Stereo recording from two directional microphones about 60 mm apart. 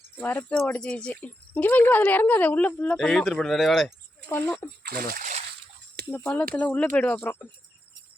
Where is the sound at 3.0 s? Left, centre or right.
Centre.